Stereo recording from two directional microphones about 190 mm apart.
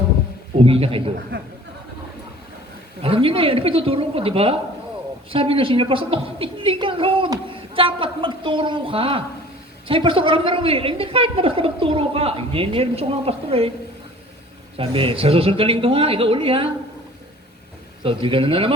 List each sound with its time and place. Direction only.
0.6 s a woman's voice: 30° right (ahead or behind)
3.0 s a woman's voice: 30° right (ahead or behind)
14.8 s a woman's voice: 30° right (ahead or behind)
18.0 s a woman's voice: 30° right (ahead or behind)